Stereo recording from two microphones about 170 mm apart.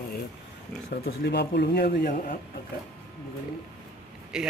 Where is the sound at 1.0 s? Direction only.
70° left (ahead or behind).